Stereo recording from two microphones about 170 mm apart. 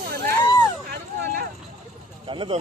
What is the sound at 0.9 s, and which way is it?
Vehicle, 60° right (ahead or behind).